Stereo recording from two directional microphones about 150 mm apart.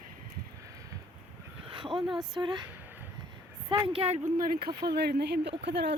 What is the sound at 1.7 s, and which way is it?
Speech, 35° right (ahead or behind).